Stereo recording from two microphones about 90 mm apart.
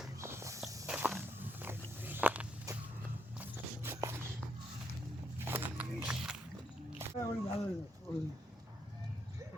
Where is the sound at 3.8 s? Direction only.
30° right (ahead or behind).